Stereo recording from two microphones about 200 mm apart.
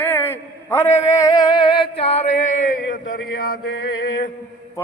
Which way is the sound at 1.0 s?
15° left (ahead or behind).